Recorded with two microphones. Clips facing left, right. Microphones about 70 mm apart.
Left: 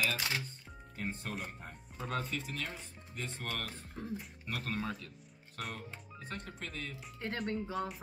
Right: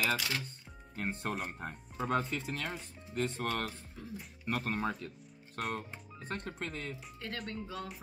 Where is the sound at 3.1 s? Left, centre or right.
Right.